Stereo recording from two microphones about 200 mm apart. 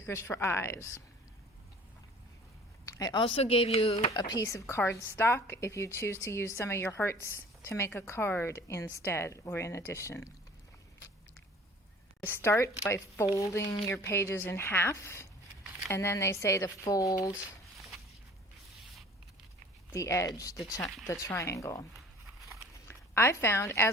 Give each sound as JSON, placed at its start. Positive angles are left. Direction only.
{"t": 0.0, "sound": "a woman's voice", "side_deg": 10}
{"t": 2.8, "sound": "speech", "side_deg": 20}
{"t": 4.1, "sound": "a woman's voice", "side_deg": 20}
{"t": 12.2, "sound": "a woman's voice", "side_deg": 10}
{"t": 17.3, "sound": "a sound", "side_deg": 0}
{"t": 19.9, "sound": "a woman's voice", "side_deg": 15}
{"t": 22.9, "sound": "speech", "side_deg": 10}